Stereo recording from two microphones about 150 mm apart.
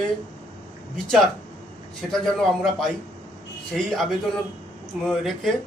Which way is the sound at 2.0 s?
5° left (ahead or behind).